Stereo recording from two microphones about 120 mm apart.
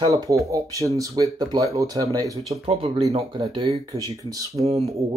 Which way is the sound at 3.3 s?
45° right (ahead or behind).